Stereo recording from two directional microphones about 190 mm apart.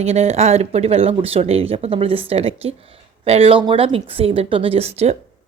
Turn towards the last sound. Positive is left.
turn(degrees=-35)  # may be behind; listen again after turning